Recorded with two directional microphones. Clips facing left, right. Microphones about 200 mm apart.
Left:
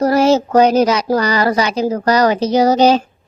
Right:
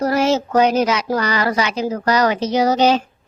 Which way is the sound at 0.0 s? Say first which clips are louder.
Left 5 dB; 35° left (ahead or behind).